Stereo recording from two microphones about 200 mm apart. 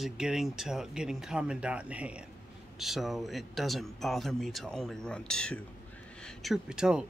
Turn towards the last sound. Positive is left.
turn(degrees=-5)  # may be behind; listen again after turning